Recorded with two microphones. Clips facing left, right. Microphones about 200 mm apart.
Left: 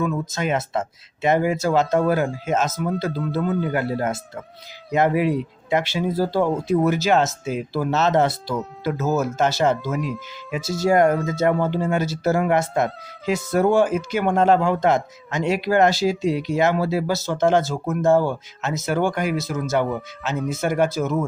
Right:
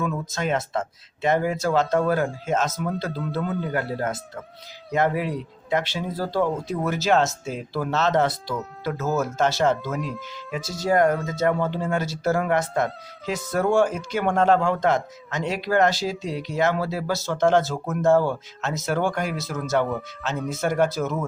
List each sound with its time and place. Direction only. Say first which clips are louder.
0.0 s speech: left 3 dB; centre (ahead or behind)
3.6 s speech: left 3 dB; 15° left (ahead or behind)